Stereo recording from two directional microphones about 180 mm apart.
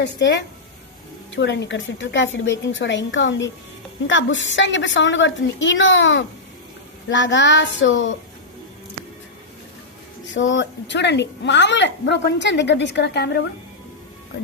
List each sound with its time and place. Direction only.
0.0 s a woman's voice: 80° left
10.3 s a woman's voice: 90° left; by 13.4 s 65° left (ahead or behind)